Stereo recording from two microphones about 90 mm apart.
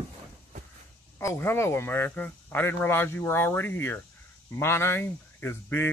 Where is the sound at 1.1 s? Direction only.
30° left (ahead or behind).